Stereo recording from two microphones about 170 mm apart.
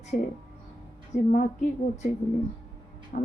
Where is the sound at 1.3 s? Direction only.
50° left (ahead or behind).